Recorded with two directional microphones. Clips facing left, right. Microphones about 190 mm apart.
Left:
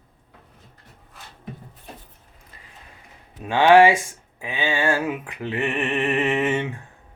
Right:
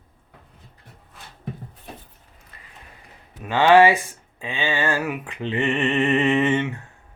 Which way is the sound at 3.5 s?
10° left (ahead or behind).